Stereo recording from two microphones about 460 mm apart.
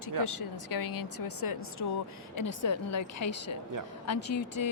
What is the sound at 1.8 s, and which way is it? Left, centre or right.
A woman's voice, left.